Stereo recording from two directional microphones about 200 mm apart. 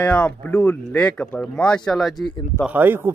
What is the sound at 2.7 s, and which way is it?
Speech, 10° right (ahead or behind).